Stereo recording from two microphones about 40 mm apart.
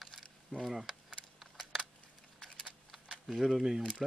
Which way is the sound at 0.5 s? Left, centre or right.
Centre.